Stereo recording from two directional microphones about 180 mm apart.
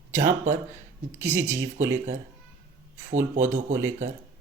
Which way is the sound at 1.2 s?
15° right (ahead or behind).